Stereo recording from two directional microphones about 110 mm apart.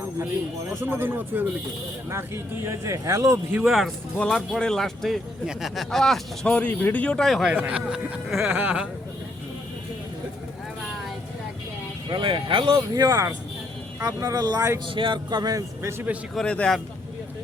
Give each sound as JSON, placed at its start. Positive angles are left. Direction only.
{"t": 0.7, "sound": "speech", "side_deg": -20}
{"t": 3.6, "sound": "speech", "side_deg": 0}
{"t": 7.5, "sound": "speech", "side_deg": -15}
{"t": 12.1, "sound": "speech", "side_deg": -50}
{"t": 14.8, "sound": "speech", "side_deg": -50}
{"t": 16.3, "sound": "speech", "side_deg": 10}